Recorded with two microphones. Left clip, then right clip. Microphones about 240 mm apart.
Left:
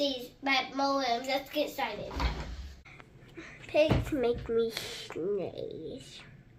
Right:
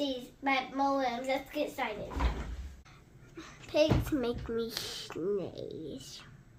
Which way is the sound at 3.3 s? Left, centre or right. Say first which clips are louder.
Left 3 dB; right.